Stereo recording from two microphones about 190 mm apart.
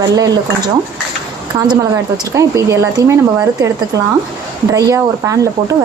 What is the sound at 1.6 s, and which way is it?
A woman's voice, 20° right (ahead or behind).